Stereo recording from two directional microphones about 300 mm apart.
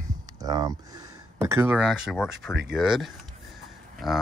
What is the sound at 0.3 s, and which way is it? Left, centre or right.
Speech, centre.